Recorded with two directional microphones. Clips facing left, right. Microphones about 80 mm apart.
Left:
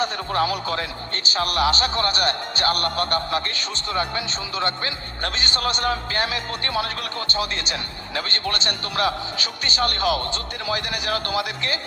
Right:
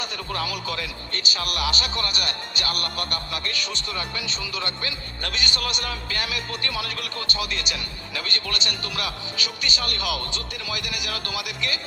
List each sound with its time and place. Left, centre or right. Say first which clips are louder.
0.0 s speech: left 7 dB; left